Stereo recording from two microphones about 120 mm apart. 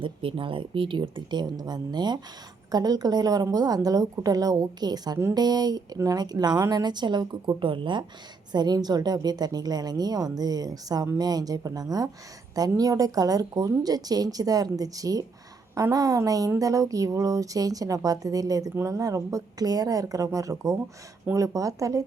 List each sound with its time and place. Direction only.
0.0 s a woman's voice: 45° right (ahead or behind); by 22.0 s 25° right (ahead or behind)